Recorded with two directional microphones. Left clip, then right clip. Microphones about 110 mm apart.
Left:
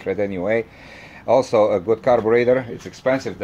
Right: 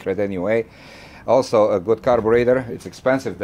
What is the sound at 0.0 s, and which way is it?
Speech, 15° right (ahead or behind).